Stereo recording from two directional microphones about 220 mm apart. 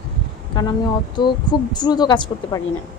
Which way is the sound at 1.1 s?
20° left (ahead or behind).